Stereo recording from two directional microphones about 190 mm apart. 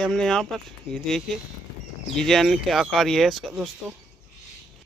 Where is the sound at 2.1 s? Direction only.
Centre (ahead or behind).